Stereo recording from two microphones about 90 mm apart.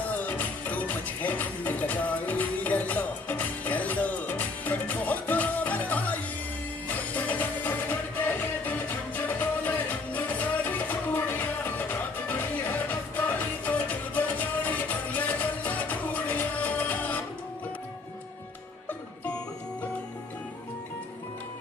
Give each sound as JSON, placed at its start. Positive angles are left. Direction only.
{"t": 0.1, "sound": "music", "side_deg": 20}